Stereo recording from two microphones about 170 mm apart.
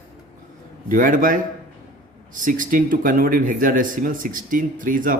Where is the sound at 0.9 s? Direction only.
50° right (ahead or behind).